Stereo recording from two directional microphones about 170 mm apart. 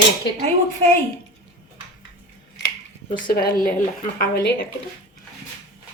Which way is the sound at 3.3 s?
60° left (ahead or behind).